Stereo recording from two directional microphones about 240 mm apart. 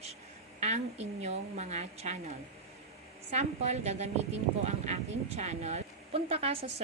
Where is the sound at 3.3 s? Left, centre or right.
Right.